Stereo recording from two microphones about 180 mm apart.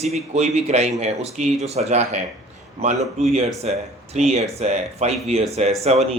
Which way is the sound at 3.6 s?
35° right (ahead or behind).